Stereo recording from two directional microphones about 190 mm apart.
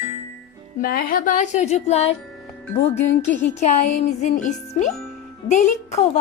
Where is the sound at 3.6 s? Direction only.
35° left (ahead or behind).